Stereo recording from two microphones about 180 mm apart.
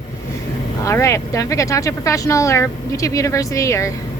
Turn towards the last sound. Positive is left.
turn(degrees=15)  # may be behind; listen again after turning